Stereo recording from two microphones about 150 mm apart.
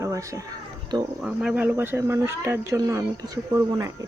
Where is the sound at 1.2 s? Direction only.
5° right (ahead or behind).